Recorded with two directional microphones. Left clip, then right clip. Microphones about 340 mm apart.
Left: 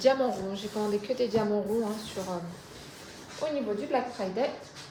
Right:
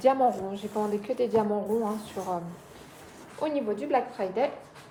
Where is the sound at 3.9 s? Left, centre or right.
Right.